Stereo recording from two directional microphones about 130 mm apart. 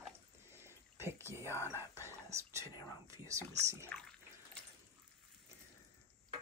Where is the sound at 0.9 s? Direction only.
20° right (ahead or behind).